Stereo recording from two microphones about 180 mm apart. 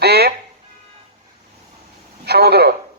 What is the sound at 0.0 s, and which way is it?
Speech, 65° right (ahead or behind).